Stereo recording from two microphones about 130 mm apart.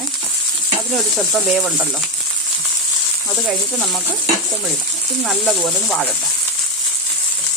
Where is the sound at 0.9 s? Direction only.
Centre (ahead or behind).